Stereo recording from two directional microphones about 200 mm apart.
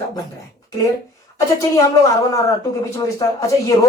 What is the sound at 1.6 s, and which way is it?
Speech, 15° left (ahead or behind).